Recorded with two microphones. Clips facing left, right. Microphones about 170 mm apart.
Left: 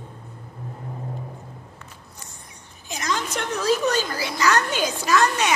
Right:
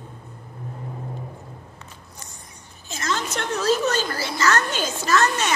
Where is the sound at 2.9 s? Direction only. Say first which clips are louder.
Even; 15° left (ahead or behind).